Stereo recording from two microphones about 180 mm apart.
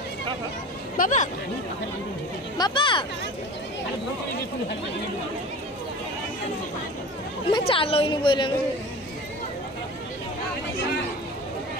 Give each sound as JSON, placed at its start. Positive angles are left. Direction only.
{"t": 0.9, "sound": "speech", "side_deg": 45}
{"t": 2.5, "sound": "a woman's voice", "side_deg": 25}
{"t": 7.5, "sound": "a woman's voice", "side_deg": 30}